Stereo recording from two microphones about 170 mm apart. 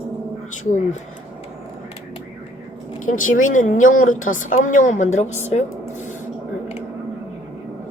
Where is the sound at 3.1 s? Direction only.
50° left (ahead or behind).